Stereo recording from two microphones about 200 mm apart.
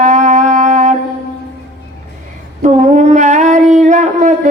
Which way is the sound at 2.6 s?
35° right (ahead or behind).